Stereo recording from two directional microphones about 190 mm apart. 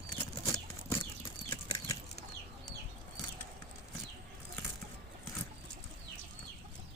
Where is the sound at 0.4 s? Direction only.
15° left (ahead or behind).